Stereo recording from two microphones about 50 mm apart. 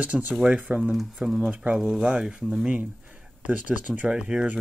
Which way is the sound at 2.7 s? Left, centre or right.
Right.